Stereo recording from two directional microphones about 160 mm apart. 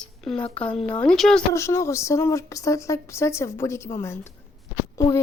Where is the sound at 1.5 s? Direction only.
20° left (ahead or behind).